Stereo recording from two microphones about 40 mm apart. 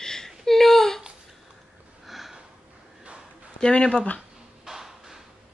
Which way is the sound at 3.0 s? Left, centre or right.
Right.